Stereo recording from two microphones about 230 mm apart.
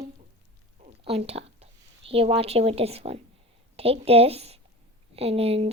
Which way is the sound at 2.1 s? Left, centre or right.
Right.